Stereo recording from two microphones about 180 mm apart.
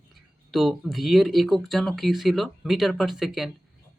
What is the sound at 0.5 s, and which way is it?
Speech, centre (ahead or behind).